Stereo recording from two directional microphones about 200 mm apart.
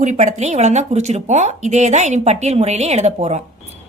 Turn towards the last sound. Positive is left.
turn(degrees=-30)  # may be behind; listen again after turning